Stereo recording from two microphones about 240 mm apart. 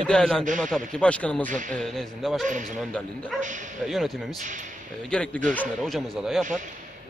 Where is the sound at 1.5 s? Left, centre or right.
Right.